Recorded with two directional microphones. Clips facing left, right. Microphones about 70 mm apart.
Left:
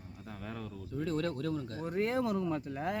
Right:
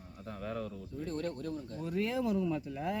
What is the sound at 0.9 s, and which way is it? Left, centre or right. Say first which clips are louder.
Speech: left 4 dB; left.